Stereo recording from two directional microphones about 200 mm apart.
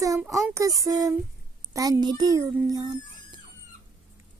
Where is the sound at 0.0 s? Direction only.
15° right (ahead or behind).